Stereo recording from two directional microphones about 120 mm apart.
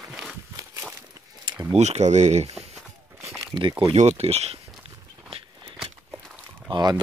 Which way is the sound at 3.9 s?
65° right (ahead or behind).